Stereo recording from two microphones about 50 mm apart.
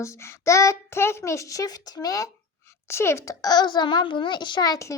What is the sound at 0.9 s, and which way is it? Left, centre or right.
Speech, left.